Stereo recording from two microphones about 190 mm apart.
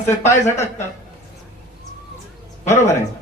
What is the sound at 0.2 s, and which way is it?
Speech, 35° left (ahead or behind).